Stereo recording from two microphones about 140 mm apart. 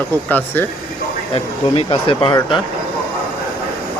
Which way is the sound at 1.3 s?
40° left (ahead or behind).